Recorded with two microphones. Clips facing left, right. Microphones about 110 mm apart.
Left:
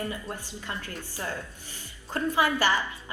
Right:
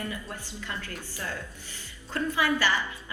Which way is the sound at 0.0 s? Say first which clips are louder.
Left 2 dB; 30° left (ahead or behind).